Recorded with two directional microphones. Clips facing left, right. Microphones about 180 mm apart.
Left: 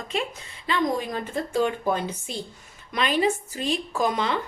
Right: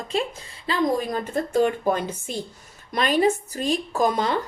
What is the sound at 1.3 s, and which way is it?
A woman's voice, 50° right (ahead or behind).